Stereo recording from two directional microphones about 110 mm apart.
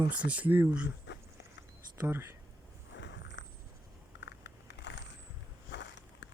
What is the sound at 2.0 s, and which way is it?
Speech, 20° right (ahead or behind).